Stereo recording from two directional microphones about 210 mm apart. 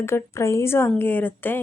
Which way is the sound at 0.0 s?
15° left (ahead or behind).